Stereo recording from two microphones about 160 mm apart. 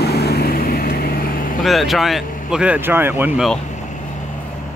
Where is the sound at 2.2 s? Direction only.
55° left (ahead or behind).